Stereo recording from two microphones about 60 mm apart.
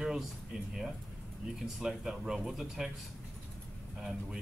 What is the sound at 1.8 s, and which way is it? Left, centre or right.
Speech, centre.